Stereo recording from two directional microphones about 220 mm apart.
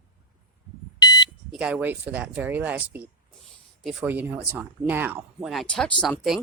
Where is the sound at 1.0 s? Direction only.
20° left (ahead or behind).